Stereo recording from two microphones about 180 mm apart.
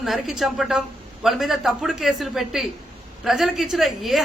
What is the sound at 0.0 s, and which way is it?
A woman's voice, centre (ahead or behind).